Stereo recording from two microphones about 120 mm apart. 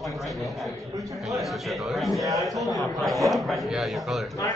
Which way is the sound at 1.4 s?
Centre (ahead or behind).